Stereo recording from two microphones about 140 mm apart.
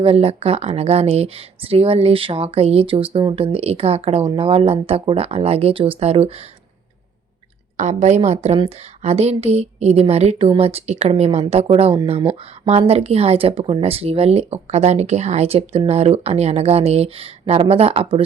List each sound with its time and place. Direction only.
0.0 s speech: 45° right (ahead or behind)
7.8 s speech: 55° right (ahead or behind)